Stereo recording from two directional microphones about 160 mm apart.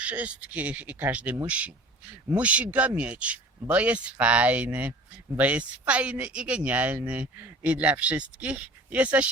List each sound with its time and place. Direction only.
0.0 s speech: 10° right (ahead or behind)